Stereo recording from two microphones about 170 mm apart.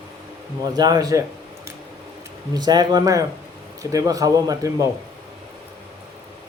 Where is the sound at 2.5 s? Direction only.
25° right (ahead or behind).